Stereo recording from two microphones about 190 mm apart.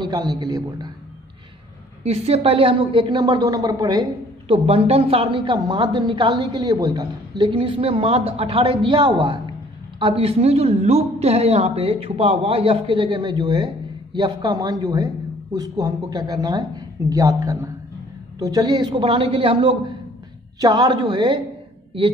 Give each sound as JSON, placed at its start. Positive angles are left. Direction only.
{"t": 0.0, "sound": "a woman's voice", "side_deg": -20}
{"t": 2.0, "sound": "a woman's voice", "side_deg": -35}